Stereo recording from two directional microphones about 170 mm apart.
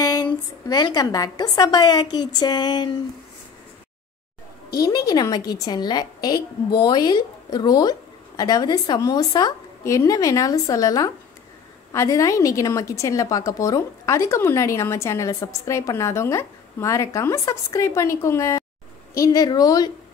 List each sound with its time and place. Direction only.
0.0 s a woman's voice: 25° left (ahead or behind)
4.6 s a woman's voice: 20° left (ahead or behind)